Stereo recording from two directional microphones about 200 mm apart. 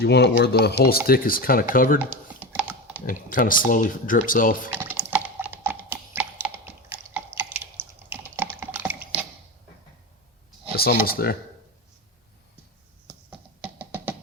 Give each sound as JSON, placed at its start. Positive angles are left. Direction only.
{"t": 0.0, "sound": "speech", "side_deg": 55}
{"t": 2.0, "sound": "typing", "side_deg": -10}
{"t": 3.1, "sound": "speech", "side_deg": 45}
{"t": 4.7, "sound": "typing", "side_deg": -10}
{"t": 5.6, "sound": "tap", "side_deg": -10}
{"t": 6.9, "sound": "typing", "side_deg": -10}
{"t": 10.7, "sound": "a sound", "side_deg": 50}
{"t": 11.0, "sound": "speech", "side_deg": 50}
{"t": 13.6, "sound": "music", "side_deg": -10}